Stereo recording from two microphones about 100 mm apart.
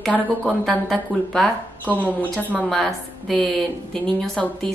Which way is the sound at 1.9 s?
15° left (ahead or behind).